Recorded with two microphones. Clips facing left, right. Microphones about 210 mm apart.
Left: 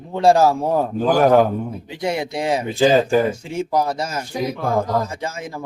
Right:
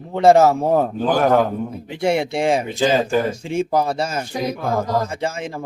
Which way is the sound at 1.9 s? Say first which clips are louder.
Right 5 dB; 25° right (ahead or behind).